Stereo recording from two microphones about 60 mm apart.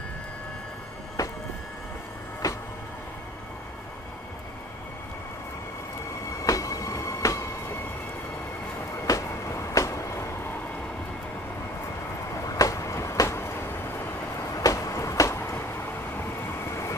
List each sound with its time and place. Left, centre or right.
1.2 s train: left
2.4 s music: left
6.4 s train: left
8.9 s a sound: left
12.4 s train: left
14.5 s a sound: left